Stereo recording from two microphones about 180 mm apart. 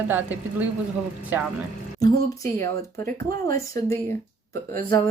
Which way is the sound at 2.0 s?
20° left (ahead or behind).